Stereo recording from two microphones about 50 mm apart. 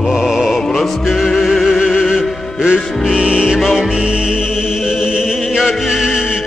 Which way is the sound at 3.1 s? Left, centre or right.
Centre.